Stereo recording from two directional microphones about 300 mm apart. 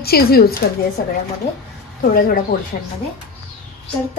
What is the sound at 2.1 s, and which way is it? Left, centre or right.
Speech, left.